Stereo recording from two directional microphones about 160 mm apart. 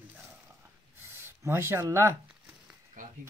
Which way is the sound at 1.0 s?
15° right (ahead or behind).